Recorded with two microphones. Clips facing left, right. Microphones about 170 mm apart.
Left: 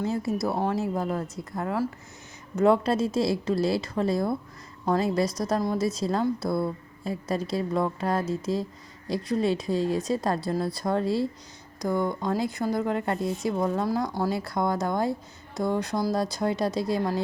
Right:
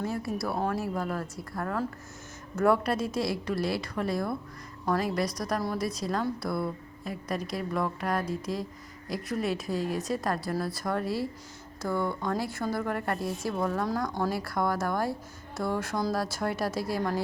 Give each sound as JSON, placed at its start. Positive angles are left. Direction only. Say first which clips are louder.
{"t": 0.0, "sound": "speech", "louder": "left 4 dB", "side_deg": 20}